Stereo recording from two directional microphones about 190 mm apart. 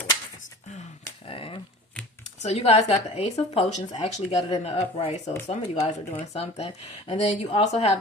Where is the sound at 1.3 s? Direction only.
30° left (ahead or behind).